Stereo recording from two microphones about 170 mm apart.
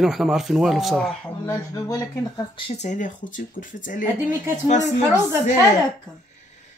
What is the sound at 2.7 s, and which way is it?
Speech, 45° left (ahead or behind).